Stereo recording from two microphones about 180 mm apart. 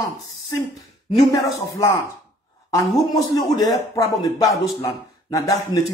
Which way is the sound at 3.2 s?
20° left (ahead or behind).